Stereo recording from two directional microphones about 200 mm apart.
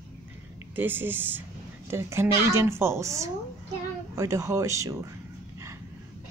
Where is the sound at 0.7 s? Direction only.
10° right (ahead or behind).